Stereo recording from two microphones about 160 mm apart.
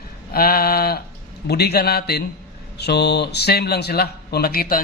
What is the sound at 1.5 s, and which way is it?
Speech, 90° left.